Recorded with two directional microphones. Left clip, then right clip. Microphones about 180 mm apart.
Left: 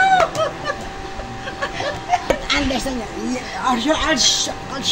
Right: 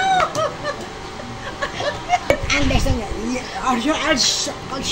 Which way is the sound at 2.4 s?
25° left (ahead or behind).